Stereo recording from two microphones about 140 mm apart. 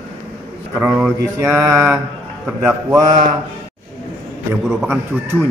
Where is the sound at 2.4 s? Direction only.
15° right (ahead or behind).